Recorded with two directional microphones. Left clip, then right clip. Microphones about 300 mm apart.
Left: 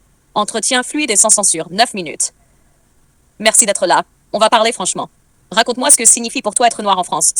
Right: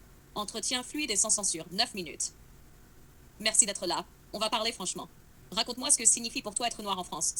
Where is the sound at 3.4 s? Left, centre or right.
Left.